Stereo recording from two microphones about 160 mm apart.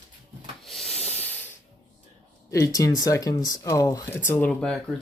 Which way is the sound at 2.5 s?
20° left (ahead or behind).